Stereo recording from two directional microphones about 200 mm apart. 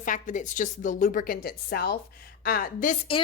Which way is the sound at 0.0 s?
40° left (ahead or behind).